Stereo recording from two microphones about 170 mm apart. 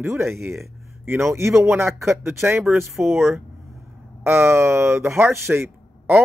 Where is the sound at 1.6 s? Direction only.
15° right (ahead or behind).